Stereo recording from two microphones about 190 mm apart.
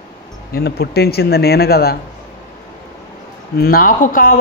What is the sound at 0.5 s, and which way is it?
A man's voice, 55° left (ahead or behind).